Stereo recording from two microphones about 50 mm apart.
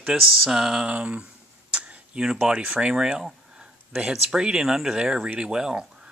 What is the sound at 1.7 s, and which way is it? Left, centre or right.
Tick-tock, right.